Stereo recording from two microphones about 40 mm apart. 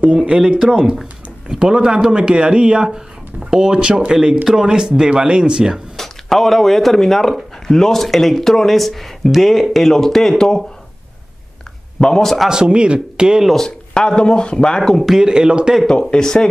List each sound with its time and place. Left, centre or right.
0.0 s speech: right
0.3 s speech: centre
5.9 s speech: centre
12.0 s speech: centre
12.4 s speech: right
13.6 s speech: centre
14.8 s speech: centre
15.1 s speech: centre
15.9 s speech: left